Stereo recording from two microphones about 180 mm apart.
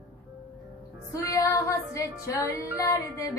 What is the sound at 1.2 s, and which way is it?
Music, 15° left (ahead or behind).